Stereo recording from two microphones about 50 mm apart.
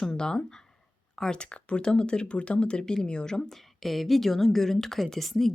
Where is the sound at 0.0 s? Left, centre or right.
Centre.